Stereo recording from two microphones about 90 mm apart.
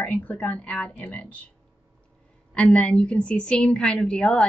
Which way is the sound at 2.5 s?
5° left (ahead or behind).